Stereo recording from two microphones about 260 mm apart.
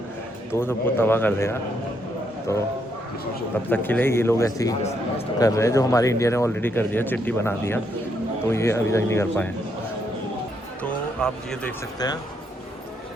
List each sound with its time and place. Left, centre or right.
0.5 s a man's voice: centre
3.7 s a man's voice: centre
4.8 s a man's voice: left
5.4 s a man's voice: centre
11.2 s speech: centre